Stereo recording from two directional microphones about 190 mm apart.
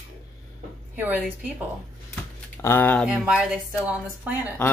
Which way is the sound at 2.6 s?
15° left (ahead or behind).